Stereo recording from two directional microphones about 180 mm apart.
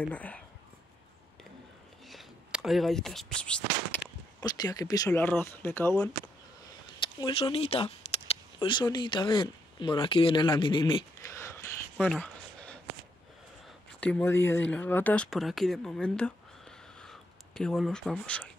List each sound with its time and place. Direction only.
0.0 s speech: 5° left (ahead or behind)
2.0 s speech: centre (ahead or behind)
4.4 s speech: 20° left (ahead or behind)
7.2 s speech: 25° left (ahead or behind)
8.5 s speech: 25° left (ahead or behind)
12.1 s a sound: 5° left (ahead or behind)
13.9 s speech: 5° left (ahead or behind)